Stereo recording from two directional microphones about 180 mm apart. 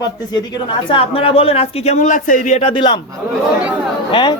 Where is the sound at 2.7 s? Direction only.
25° left (ahead or behind).